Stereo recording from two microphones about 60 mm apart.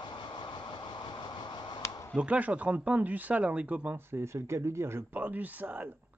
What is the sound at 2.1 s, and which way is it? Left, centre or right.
Speech, right.